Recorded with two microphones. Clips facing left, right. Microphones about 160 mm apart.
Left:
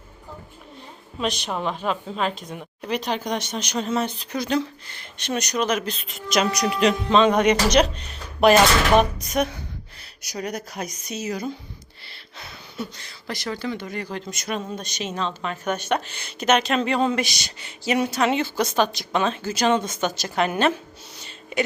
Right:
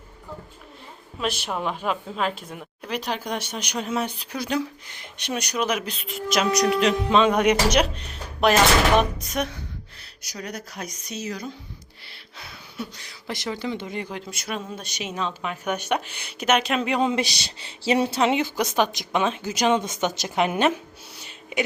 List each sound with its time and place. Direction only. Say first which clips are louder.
1.2 s a woman's voice: left 1 dB; 5° right (ahead or behind)
10.2 s speech: left 5 dB; 15° left (ahead or behind)
12.1 s a sound: left 2 dB; 5° right (ahead or behind)
13.0 s a woman's voice: even; 10° right (ahead or behind)
14.1 s a woman's voice: left 3 dB; 5° right (ahead or behind)
17.2 s a woman's voice: even; 30° right (ahead or behind)
21.2 s a sound: left 1 dB; 10° right (ahead or behind)